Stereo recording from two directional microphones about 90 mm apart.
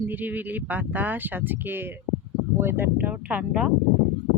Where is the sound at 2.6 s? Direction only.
25° right (ahead or behind).